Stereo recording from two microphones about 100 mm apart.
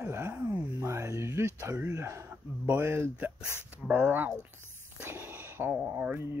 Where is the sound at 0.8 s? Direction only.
30° right (ahead or behind).